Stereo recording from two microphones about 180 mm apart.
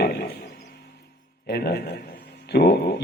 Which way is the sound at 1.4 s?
60° left (ahead or behind).